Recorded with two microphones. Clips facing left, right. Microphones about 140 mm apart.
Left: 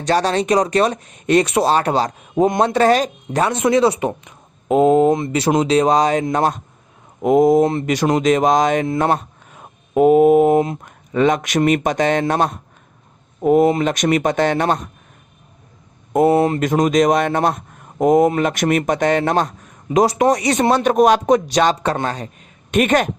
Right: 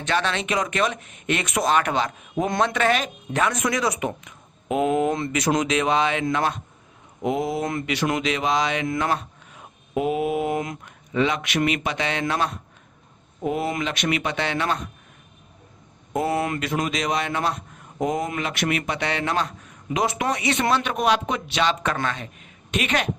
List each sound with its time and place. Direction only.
0.0 s a man's voice: 40° left (ahead or behind)
7.6 s a man's voice: 30° left (ahead or behind); by 8.9 s 45° left (ahead or behind)
9.0 s mantra: 45° left (ahead or behind)
10.8 s a man's voice: 45° left (ahead or behind)
16.2 s a man's voice: 30° left (ahead or behind)
16.6 s a man's voice: 45° left (ahead or behind)